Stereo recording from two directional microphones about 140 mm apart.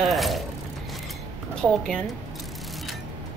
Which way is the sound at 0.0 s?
Centre (ahead or behind).